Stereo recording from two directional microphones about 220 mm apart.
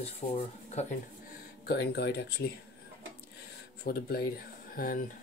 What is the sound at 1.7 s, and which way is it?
Speech, 50° left (ahead or behind).